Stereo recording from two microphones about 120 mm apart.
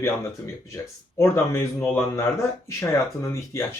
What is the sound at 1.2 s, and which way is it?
Speech, 25° left (ahead or behind).